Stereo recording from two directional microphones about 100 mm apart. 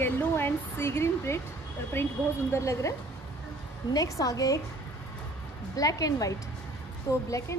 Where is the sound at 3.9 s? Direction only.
35° left (ahead or behind).